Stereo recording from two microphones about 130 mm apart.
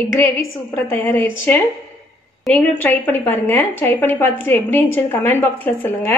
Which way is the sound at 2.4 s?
10° left (ahead or behind).